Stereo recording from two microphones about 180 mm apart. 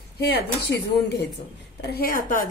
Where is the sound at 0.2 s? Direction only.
65° left (ahead or behind).